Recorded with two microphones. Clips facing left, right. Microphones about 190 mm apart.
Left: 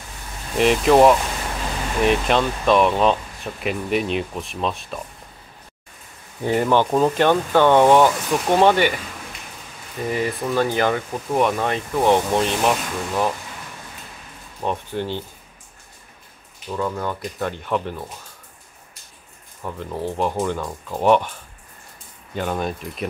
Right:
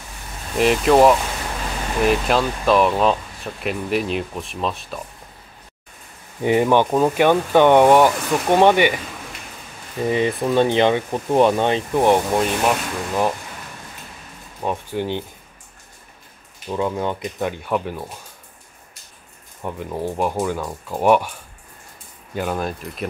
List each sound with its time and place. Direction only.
0.6 s speech: centre (ahead or behind)
6.4 s speech: 15° right (ahead or behind)
10.1 s speech: 25° right (ahead or behind)
12.2 s speech: 5° right (ahead or behind)
14.6 s speech: 10° right (ahead or behind)
16.7 s speech: 20° right (ahead or behind)
19.6 s speech: 10° right (ahead or behind)